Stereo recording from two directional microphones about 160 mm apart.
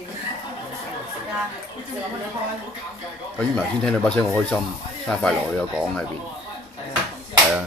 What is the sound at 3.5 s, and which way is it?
Speech, 5° left (ahead or behind).